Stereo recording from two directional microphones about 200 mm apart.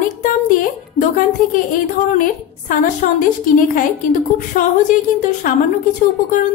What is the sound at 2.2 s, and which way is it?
Speech, 40° left (ahead or behind).